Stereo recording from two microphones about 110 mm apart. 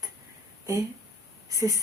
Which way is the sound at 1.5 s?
30° right (ahead or behind).